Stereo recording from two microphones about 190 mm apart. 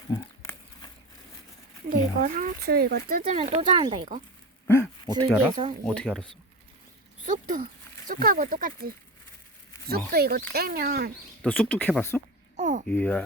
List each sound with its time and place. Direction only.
0.1 s a sound: 20° left (ahead or behind)
1.9 s speech: 45° right (ahead or behind)
3.3 s speech: 35° right (ahead or behind)
3.8 s speech: 25° right (ahead or behind)
5.8 s speech: 5° left (ahead or behind)
7.3 s speech: 45° right (ahead or behind)
10.1 s speech: 55° right (ahead or behind)
11.4 s speech: 5° left (ahead or behind)
12.5 s babbling: 40° right (ahead or behind)
12.9 s speech: 10° left (ahead or behind)